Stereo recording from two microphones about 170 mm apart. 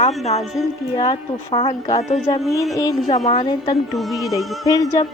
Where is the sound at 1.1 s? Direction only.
35° left (ahead or behind).